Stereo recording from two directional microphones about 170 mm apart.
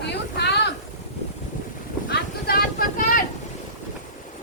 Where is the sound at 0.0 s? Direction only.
80° left.